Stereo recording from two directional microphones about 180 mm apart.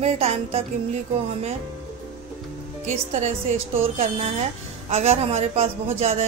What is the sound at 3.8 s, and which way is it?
Speech, 40° right (ahead or behind).